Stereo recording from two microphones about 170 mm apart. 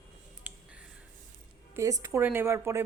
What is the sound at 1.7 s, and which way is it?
Speech, 20° right (ahead or behind).